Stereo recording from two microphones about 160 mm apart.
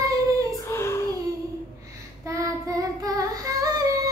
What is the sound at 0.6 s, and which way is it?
Child singing, 15° left (ahead or behind).